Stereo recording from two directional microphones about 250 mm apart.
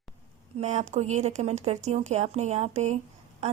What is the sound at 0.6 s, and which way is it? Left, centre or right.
Speech, right.